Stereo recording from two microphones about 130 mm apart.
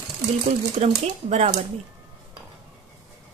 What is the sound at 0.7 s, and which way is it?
Speech, 55° right (ahead or behind).